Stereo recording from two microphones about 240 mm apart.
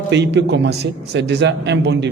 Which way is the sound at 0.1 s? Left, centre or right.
Right.